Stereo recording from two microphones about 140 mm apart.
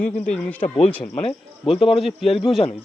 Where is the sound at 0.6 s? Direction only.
45° left (ahead or behind).